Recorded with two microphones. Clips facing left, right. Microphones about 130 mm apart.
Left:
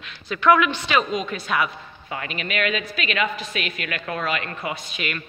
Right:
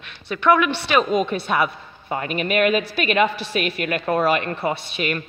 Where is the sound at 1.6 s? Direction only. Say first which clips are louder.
Right 4 dB; 40° right (ahead or behind).